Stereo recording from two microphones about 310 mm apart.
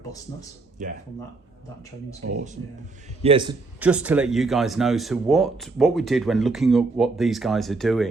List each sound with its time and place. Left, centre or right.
0.8 s speech: right
3.2 s a man's voice: centre
3.8 s speech: centre